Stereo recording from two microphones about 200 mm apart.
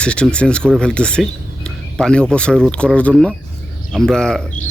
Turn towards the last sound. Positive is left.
turn(degrees=5)  # may be behind; listen again after turning